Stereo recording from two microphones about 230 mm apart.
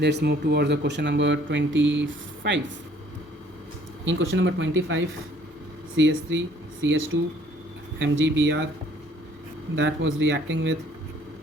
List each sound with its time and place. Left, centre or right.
0.0 s speech: right
4.0 s speech: right
9.7 s speech: right